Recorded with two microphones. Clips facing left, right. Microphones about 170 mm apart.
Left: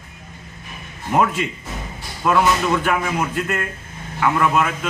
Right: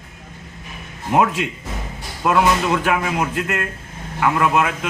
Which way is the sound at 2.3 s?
10° right (ahead or behind).